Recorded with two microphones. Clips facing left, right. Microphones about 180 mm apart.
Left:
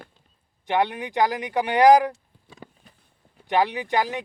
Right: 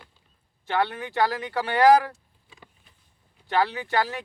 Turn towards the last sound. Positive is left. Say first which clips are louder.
# left 2 dB
turn(degrees=15)  # may be behind; listen again after turning